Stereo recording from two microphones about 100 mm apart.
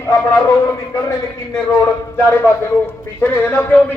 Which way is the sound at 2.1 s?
25° left (ahead or behind).